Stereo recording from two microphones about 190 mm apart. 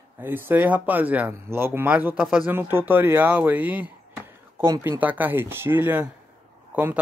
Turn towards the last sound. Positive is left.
turn(degrees=-10)  # may be behind; listen again after turning